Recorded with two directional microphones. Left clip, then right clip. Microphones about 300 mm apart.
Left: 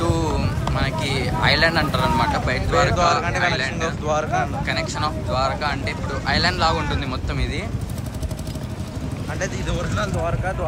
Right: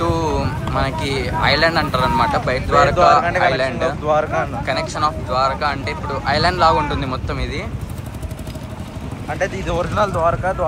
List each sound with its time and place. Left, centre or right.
0.0 s speech: centre
4.1 s speech: right
4.6 s speech: centre
9.9 s speech: left